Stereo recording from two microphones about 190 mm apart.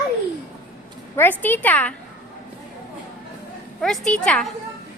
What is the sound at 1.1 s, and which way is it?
Speech, 10° left (ahead or behind).